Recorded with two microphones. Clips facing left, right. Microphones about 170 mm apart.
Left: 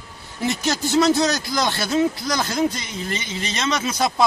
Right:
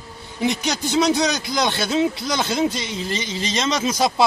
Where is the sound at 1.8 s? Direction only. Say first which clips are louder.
Even; 20° right (ahead or behind).